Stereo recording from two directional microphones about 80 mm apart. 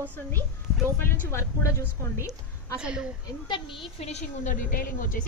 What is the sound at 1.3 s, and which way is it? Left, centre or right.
A woman's voice, left.